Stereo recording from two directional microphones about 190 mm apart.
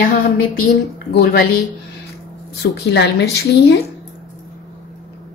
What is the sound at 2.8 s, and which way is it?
Speech, 65° left (ahead or behind).